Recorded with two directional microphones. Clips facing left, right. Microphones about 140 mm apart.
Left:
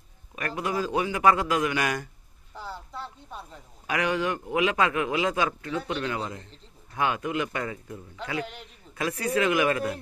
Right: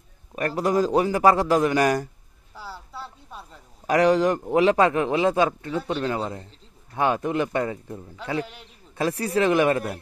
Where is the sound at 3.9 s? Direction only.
35° right (ahead or behind).